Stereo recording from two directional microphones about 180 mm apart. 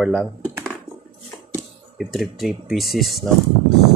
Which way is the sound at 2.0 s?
Centre (ahead or behind).